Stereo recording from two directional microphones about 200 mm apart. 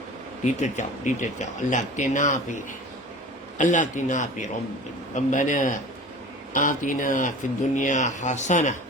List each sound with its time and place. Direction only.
0.4 s speech: 35° left (ahead or behind)
3.6 s speech: 40° left (ahead or behind)